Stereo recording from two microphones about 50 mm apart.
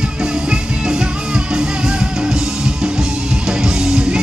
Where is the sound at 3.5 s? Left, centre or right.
Centre.